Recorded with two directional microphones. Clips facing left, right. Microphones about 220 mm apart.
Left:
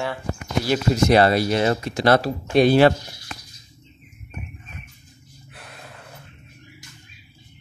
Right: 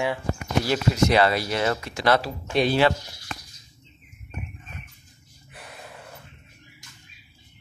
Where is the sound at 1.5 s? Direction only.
25° left (ahead or behind).